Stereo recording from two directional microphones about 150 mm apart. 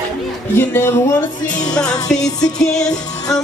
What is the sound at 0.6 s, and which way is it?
Music, 15° left (ahead or behind).